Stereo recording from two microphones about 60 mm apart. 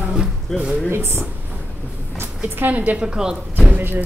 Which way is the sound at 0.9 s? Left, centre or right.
Right.